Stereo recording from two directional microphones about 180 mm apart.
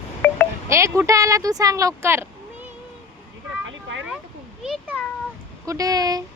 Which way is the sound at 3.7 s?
90° right.